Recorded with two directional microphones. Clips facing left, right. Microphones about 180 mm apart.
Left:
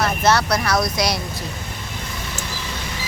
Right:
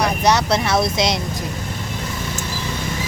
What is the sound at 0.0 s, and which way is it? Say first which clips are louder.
Speech: right 1 dB; 15° right (ahead or behind).